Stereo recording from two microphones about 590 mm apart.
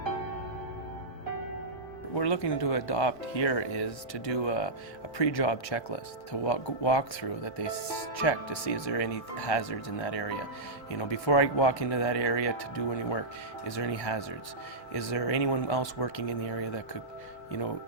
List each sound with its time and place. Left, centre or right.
2.1 s speech: left